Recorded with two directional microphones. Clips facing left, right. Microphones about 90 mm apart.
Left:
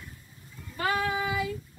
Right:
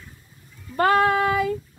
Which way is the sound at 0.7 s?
55° right (ahead or behind).